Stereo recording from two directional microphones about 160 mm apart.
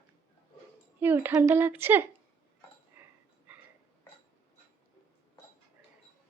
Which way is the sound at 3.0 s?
15° right (ahead or behind).